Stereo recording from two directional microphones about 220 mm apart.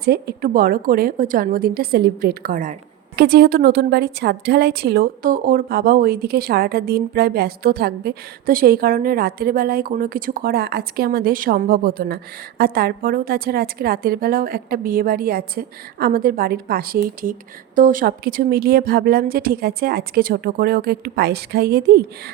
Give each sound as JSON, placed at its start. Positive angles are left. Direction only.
{"t": 0.0, "sound": "a woman's voice", "side_deg": -45}